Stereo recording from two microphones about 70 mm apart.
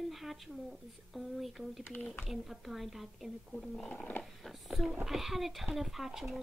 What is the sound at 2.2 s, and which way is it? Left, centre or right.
Speech, centre.